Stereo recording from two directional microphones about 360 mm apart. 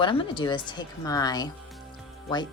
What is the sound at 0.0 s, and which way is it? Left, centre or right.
Speech, centre.